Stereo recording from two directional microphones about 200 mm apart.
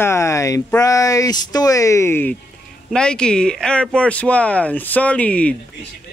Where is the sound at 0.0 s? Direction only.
15° left (ahead or behind).